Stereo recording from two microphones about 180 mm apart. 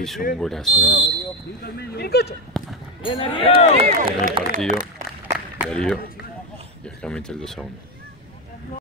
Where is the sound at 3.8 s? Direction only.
35° right (ahead or behind).